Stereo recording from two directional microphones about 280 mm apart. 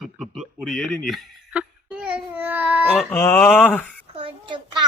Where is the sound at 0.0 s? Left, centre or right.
Centre.